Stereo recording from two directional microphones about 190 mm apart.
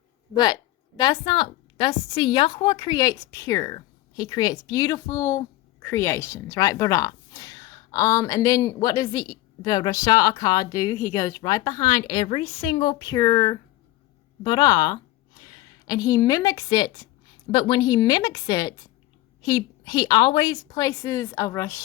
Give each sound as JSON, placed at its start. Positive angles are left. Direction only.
{"t": 0.3, "sound": "a woman's voice", "side_deg": 20}